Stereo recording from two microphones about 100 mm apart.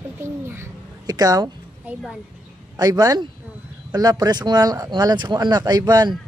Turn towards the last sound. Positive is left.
turn(degrees=-40)  # may be behind; listen again after turning